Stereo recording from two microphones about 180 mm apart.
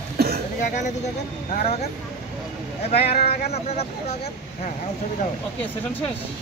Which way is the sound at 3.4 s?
35° left (ahead or behind).